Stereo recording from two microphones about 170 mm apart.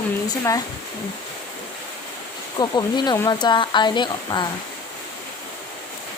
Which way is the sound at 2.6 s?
25° left (ahead or behind).